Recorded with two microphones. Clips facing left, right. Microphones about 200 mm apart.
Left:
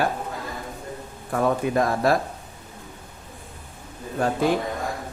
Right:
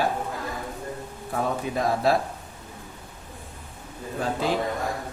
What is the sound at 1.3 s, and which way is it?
Speech, 55° left (ahead or behind).